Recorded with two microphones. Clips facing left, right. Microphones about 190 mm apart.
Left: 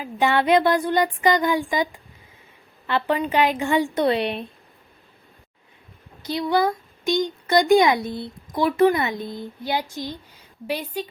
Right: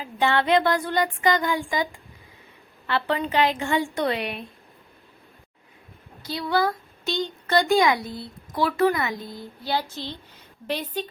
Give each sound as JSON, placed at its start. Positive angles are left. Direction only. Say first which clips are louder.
{"t": 0.0, "sound": "a woman's voice", "louder": "left 2 dB", "side_deg": 15}
{"t": 6.2, "sound": "a woman's voice", "louder": "left 3 dB", "side_deg": 20}